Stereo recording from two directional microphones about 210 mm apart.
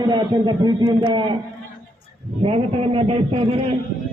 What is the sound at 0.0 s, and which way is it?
A man's voice, 20° right (ahead or behind).